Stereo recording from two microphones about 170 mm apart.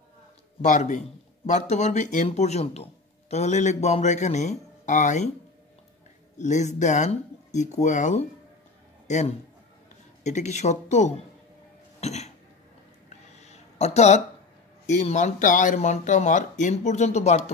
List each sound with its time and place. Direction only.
0.6 s speech: 45° left (ahead or behind)
6.3 s a man's voice: 45° left (ahead or behind)
12.0 s cough: 40° left (ahead or behind)
13.4 s a sound: 40° left (ahead or behind)
14.9 s speech: 45° left (ahead or behind)